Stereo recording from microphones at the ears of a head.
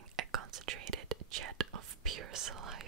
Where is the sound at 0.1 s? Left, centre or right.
Right.